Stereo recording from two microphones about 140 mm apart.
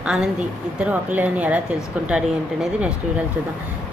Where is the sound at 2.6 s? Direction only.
5° right (ahead or behind).